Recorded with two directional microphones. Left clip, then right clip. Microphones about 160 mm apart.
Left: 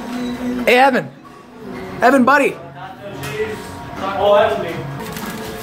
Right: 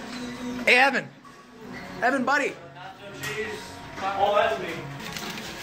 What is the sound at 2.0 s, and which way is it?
Speech, 60° left (ahead or behind).